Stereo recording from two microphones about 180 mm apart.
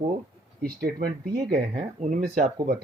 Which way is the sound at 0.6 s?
55° right (ahead or behind).